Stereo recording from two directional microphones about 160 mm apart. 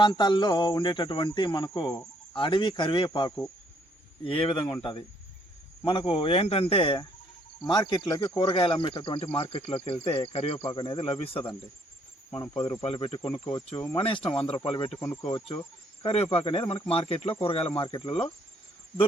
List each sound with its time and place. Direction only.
0.0 s speech: 30° left (ahead or behind)
12.8 s speech: 35° left (ahead or behind)
14.9 s speech: 15° left (ahead or behind)
15.3 s speech: 30° left (ahead or behind)